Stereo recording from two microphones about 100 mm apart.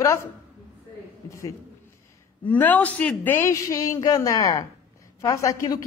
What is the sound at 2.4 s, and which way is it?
A man's voice, 15° left (ahead or behind).